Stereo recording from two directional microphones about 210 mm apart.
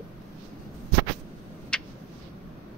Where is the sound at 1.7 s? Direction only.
5° left (ahead or behind).